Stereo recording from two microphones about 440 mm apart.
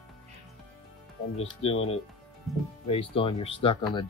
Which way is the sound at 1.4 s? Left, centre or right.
Centre.